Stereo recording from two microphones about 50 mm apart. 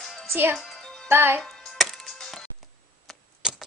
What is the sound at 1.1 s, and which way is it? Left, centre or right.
Speech, right.